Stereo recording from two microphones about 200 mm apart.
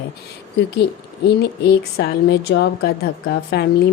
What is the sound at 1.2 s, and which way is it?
A woman's voice, 55° left (ahead or behind).